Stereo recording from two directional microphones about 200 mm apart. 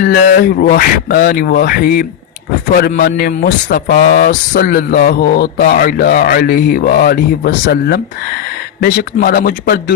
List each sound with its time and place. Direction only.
0.0 s a man's voice: 50° left (ahead or behind)